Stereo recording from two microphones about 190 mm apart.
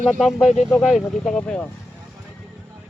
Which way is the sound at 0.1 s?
Centre (ahead or behind).